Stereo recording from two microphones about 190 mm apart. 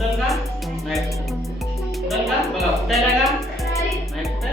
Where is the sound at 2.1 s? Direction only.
Centre (ahead or behind).